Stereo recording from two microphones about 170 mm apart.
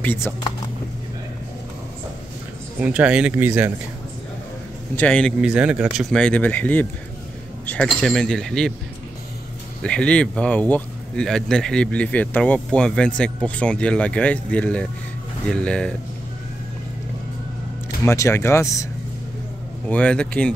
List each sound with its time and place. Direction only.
0.0 s speech: 10° left (ahead or behind)
2.8 s speech: 5° right (ahead or behind)
4.9 s speech: 5° left (ahead or behind)
5.4 s speech: 5° right (ahead or behind)
9.8 s speech: 5° left (ahead or behind)
18.0 s speech: 15° left (ahead or behind)
19.9 s speech: 5° left (ahead or behind)